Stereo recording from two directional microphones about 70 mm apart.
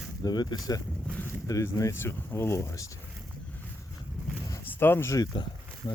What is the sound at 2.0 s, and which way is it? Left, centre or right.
Speech, left.